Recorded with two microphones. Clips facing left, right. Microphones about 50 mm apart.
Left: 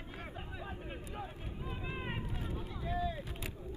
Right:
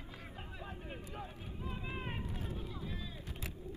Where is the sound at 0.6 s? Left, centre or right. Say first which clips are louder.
Left 2 dB; centre.